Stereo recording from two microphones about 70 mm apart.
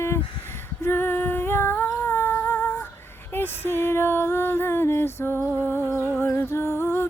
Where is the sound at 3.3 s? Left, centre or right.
Left.